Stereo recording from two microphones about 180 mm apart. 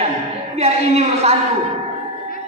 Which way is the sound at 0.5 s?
35° right (ahead or behind).